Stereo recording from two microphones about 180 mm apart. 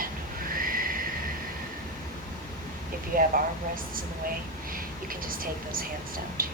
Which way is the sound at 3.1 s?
50° right (ahead or behind).